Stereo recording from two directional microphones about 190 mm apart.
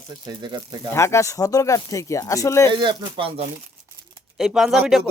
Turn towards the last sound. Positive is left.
turn(degrees=0)  # may be behind; listen again after turning